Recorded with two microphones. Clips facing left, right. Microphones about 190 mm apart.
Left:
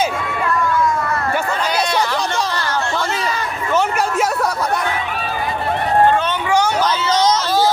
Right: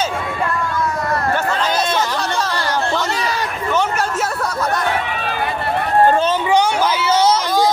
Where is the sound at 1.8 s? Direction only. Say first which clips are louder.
Left 1 dB; 10° left (ahead or behind).